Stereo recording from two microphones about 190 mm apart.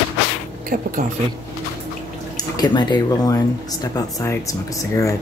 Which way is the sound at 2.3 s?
20° left (ahead or behind).